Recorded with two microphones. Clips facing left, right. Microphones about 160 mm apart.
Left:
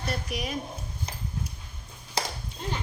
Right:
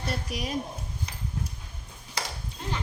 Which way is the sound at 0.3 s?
35° right (ahead or behind).